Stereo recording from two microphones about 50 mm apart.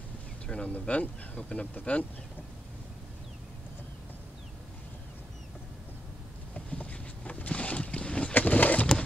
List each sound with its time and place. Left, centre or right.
0.5 s speech: left
6.5 s boat: left
8.4 s a sound: left